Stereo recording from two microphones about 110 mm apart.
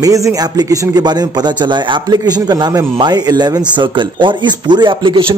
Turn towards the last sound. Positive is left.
turn(degrees=-45)  # may be behind; listen again after turning